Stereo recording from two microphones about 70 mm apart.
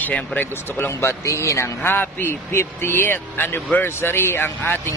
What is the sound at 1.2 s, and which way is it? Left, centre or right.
Speech, left.